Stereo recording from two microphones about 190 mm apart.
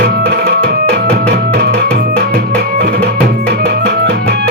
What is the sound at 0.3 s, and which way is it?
Music, 60° right (ahead or behind).